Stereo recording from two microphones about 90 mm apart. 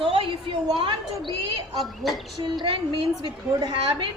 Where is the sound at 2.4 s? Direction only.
60° right (ahead or behind).